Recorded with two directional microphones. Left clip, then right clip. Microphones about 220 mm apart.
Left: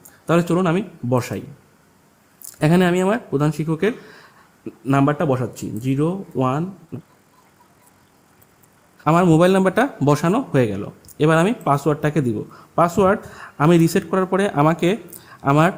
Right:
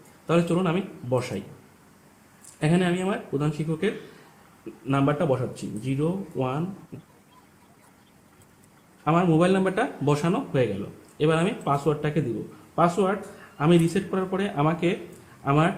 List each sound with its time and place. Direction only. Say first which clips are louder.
0.3 s speech: left 5 dB; 40° left (ahead or behind)
2.6 s speech: left 8 dB; 45° left (ahead or behind)
9.0 s speech: left 7 dB; 50° left (ahead or behind)